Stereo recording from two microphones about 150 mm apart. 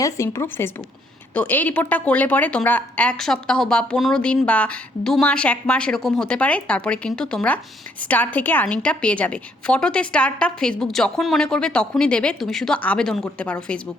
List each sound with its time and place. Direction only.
0.0 s a woman's voice: 20° left (ahead or behind)